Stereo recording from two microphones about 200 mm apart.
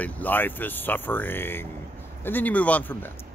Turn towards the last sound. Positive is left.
turn(degrees=10)  # may be behind; listen again after turning